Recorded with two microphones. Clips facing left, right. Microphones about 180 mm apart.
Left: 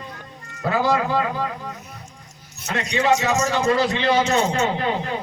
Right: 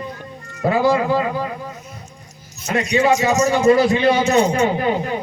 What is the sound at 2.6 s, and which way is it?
A man's voice, 10° right (ahead or behind).